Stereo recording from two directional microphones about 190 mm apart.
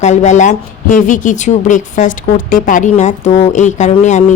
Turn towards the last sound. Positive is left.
turn(degrees=40)  # may be behind; listen again after turning